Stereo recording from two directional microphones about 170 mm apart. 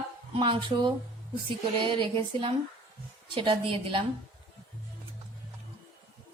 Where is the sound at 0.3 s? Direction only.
30° right (ahead or behind).